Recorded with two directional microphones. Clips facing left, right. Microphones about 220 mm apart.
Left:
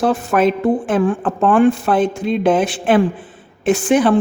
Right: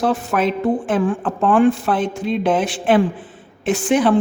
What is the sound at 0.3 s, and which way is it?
A man's voice, 50° left (ahead or behind).